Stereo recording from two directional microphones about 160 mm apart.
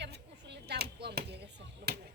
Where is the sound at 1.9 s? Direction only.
90° right.